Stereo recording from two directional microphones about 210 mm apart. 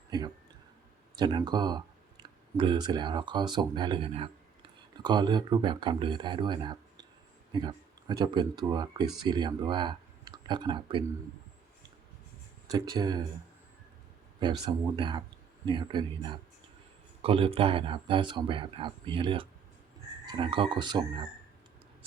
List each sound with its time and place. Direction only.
0.1 s speech: 20° right (ahead or behind)
12.7 s speech: 20° right (ahead or behind)
14.3 s speech: 20° right (ahead or behind)